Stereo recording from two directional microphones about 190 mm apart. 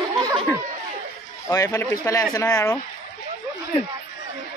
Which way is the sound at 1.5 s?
15° left (ahead or behind).